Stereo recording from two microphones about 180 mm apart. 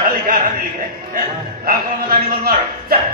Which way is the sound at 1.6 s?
50° right (ahead or behind).